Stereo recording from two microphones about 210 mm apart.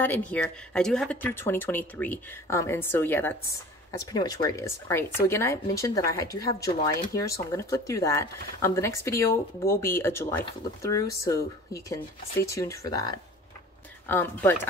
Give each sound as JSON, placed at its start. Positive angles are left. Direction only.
{"t": 0.0, "sound": "speech", "side_deg": 10}